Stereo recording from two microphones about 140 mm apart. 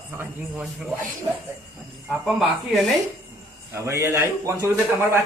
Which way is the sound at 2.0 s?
Centre (ahead or behind).